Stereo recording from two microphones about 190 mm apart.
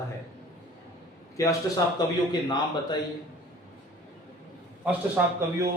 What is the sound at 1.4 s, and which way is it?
A man's voice, 15° left (ahead or behind).